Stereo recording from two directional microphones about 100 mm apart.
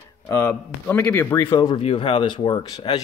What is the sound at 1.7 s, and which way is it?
Speech, 70° left (ahead or behind).